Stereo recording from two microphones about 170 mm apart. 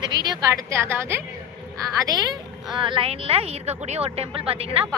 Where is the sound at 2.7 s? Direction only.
30° right (ahead or behind).